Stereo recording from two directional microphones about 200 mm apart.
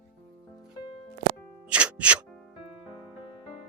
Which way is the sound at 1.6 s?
5° right (ahead or behind).